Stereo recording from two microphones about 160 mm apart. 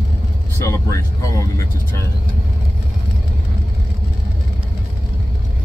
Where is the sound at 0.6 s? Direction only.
20° left (ahead or behind).